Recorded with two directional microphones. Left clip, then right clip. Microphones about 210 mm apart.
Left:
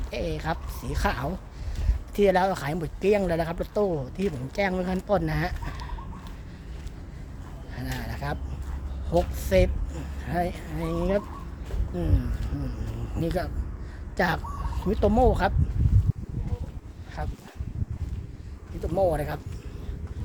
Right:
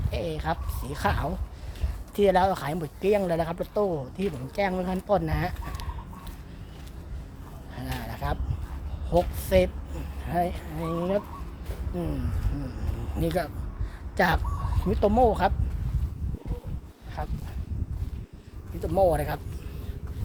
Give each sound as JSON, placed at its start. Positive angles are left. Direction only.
{"t": 0.1, "sound": "speech", "side_deg": 0}
{"t": 7.8, "sound": "a sound", "side_deg": -5}
{"t": 9.0, "sound": "a woman's voice", "side_deg": 0}
{"t": 13.1, "sound": "speech", "side_deg": -10}
{"t": 17.2, "sound": "speech", "side_deg": -5}
{"t": 18.8, "sound": "speech", "side_deg": -15}